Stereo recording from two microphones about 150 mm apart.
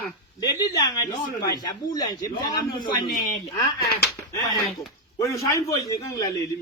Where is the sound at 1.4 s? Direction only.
25° left (ahead or behind).